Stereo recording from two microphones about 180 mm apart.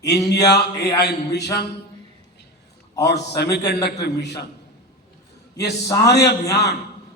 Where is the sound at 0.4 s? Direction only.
65° left (ahead or behind).